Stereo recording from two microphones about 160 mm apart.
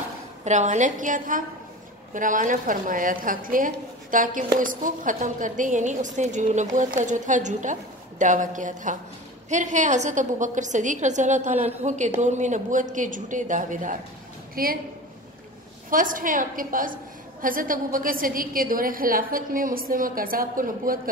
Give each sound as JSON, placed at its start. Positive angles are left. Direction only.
{"t": 0.5, "sound": "a woman's voice", "side_deg": -50}
{"t": 14.5, "sound": "a woman's voice", "side_deg": -65}
{"t": 15.9, "sound": "a woman's voice", "side_deg": -60}